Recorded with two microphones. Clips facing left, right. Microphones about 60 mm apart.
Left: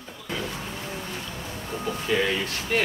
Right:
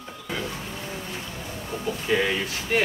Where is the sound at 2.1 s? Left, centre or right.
Centre.